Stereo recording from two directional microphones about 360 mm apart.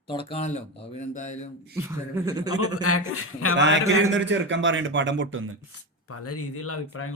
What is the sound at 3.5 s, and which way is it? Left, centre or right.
A man's voice, right.